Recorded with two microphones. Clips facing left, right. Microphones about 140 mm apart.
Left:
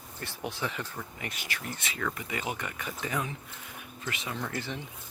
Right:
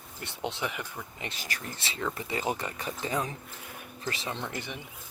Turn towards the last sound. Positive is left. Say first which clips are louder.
# left 1 dB
turn(degrees=-20)  # may be behind; listen again after turning